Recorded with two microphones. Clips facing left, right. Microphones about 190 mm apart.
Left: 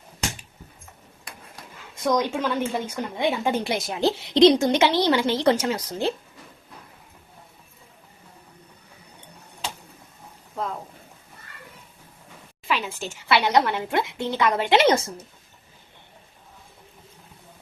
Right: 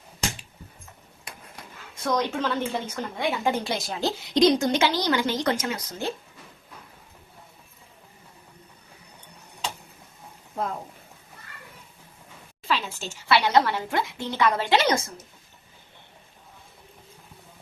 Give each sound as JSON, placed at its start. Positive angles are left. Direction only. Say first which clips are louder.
{"t": 2.0, "sound": "a woman's voice", "louder": "left 3 dB", "side_deg": 15}
{"t": 12.6, "sound": "a woman's voice", "louder": "left 1 dB", "side_deg": 15}